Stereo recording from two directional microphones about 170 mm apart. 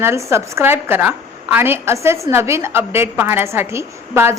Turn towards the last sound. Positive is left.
turn(degrees=-15)  # may be behind; listen again after turning